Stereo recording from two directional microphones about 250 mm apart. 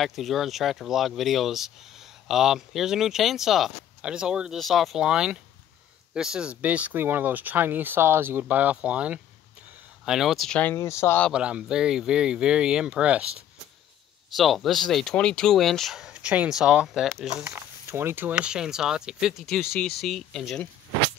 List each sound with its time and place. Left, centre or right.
0.0 s speech: centre
14.3 s speech: centre